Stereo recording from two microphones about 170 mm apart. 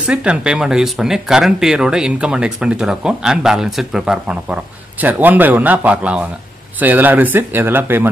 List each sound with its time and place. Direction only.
0.0 s speech: 5° right (ahead or behind)